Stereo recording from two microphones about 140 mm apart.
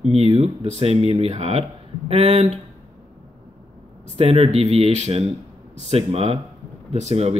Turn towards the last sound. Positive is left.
turn(degrees=-50)  # may be behind; listen again after turning